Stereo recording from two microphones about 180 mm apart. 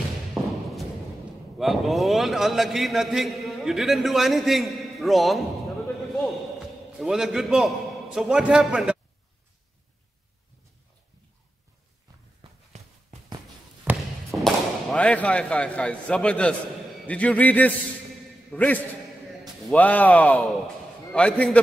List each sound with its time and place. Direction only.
0.3 s thump: centre (ahead or behind)
1.6 s a man's voice: centre (ahead or behind)
6.0 s a sound: centre (ahead or behind)
12.7 s walk: 40° right (ahead or behind)
13.9 s a sound: 10° right (ahead or behind)
14.3 s a man's voice: centre (ahead or behind)